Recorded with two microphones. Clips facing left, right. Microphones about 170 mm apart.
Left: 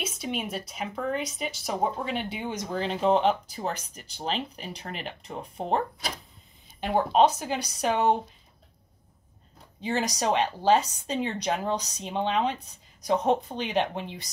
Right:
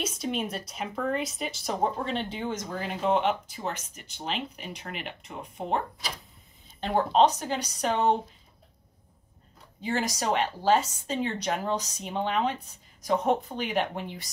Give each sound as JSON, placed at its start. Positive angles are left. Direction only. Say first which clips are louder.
{"t": 0.0, "sound": "speech", "louder": "right 2 dB", "side_deg": 5}
{"t": 6.8, "sound": "speech", "louder": "left 1 dB", "side_deg": 10}
{"t": 9.8, "sound": "a woman's voice", "louder": "left 1 dB", "side_deg": 20}